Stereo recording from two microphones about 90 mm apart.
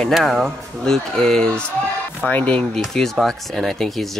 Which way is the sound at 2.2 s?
15° left (ahead or behind).